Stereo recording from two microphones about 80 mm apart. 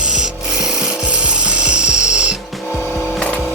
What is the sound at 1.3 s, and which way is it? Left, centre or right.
Filing, centre.